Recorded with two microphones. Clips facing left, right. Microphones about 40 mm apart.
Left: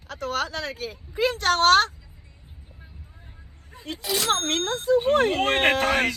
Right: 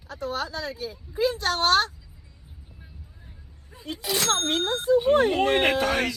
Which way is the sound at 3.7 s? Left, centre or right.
Left.